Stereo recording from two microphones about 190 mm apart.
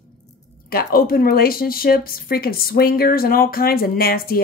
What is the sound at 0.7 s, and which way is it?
Speech, 50° left (ahead or behind).